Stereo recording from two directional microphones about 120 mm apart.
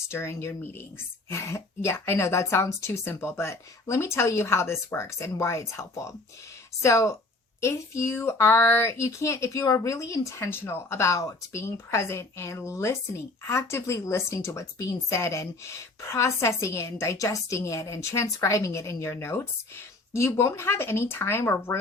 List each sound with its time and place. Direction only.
0.1 s speech: 20° left (ahead or behind)